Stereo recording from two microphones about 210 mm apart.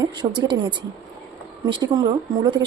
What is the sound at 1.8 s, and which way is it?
Speech, 20° right (ahead or behind).